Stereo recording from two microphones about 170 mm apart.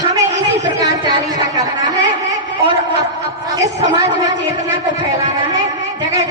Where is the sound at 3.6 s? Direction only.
20° right (ahead or behind).